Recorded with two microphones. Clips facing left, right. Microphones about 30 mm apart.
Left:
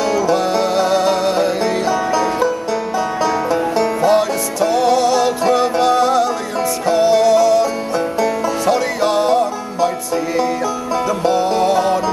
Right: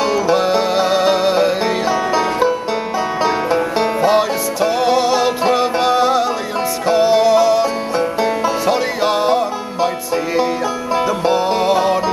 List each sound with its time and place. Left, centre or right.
0.0 s music: right